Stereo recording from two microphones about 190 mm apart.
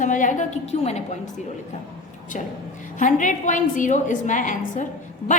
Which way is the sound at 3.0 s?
40° left (ahead or behind).